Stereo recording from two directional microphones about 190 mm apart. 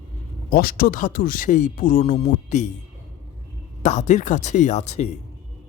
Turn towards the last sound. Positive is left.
turn(degrees=35)  # may be behind; listen again after turning